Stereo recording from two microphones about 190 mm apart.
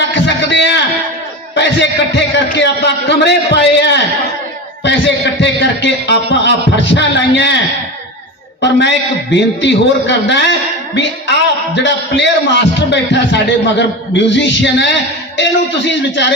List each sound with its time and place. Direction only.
0.1 s a sound: 70° left (ahead or behind)
1.5 s a man's voice: 70° left (ahead or behind)
8.6 s a man's voice: 70° left (ahead or behind)